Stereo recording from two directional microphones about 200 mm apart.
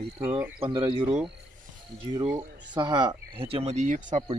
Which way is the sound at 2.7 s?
20° right (ahead or behind).